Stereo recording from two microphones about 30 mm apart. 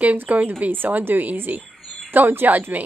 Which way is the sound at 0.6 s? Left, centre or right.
Right.